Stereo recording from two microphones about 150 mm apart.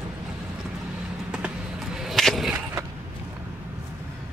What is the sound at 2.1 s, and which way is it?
Whip, centre (ahead or behind).